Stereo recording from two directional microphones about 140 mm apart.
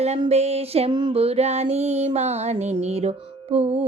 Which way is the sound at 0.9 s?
35° right (ahead or behind).